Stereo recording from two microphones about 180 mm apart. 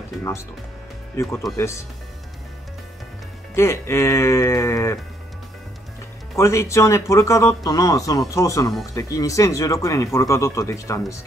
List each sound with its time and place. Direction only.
1.1 s speech: 15° left (ahead or behind)
3.5 s speech: 15° left (ahead or behind)
6.3 s speech: 15° left (ahead or behind)